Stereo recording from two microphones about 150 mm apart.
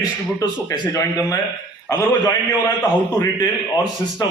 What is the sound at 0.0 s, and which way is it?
A man's voice, 25° left (ahead or behind).